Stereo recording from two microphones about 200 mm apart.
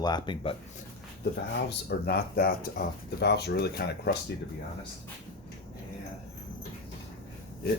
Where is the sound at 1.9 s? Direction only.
50° left (ahead or behind).